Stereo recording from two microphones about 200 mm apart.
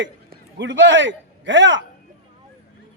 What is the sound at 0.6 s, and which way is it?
A man's voice, 65° right (ahead or behind).